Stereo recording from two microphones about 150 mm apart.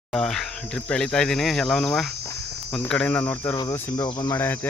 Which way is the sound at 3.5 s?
20° left (ahead or behind).